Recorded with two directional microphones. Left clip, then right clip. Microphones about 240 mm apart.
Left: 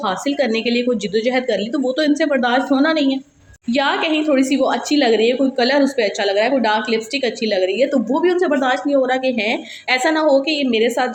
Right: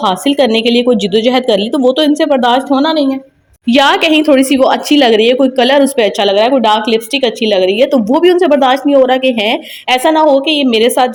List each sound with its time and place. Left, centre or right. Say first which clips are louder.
0.0 s a woman's voice: right 8 dB; right
3.7 s a woman's voice: right 9 dB; right